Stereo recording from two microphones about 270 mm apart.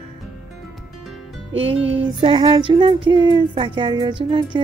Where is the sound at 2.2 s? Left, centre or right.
Centre.